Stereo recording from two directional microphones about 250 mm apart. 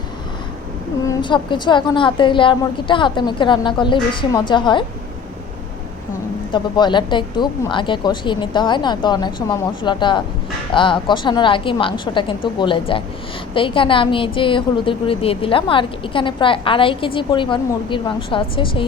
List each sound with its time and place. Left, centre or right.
1.0 s a woman's voice: centre
6.5 s a woman's voice: centre